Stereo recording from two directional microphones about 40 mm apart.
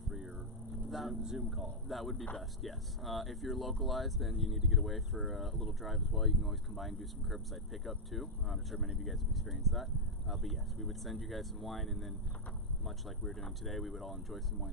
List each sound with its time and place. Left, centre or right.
0.9 s vehicle: centre
1.2 s speech: right
1.9 s speech: centre